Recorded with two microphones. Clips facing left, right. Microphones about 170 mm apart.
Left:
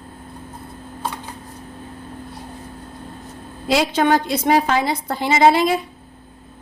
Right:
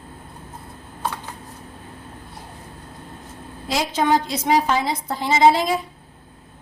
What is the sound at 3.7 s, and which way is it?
A woman's voice, 70° left (ahead or behind).